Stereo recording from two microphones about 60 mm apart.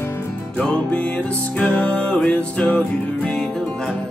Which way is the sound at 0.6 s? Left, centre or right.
Centre.